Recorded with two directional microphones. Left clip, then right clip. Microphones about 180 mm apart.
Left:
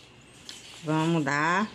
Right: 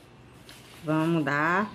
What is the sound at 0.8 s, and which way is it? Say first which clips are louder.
Speech: right 1 dB; 45° left (ahead or behind).